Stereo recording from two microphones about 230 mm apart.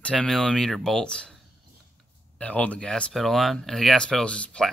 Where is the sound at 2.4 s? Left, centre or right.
Centre.